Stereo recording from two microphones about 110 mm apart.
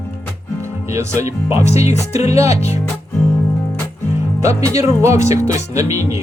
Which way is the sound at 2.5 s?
75° left (ahead or behind).